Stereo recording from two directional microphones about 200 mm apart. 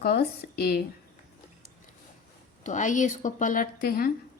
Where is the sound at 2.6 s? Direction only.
40° left (ahead or behind).